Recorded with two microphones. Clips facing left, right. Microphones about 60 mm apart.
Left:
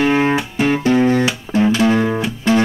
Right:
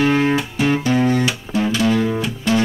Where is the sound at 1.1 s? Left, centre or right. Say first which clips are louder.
Left 2 dB; left.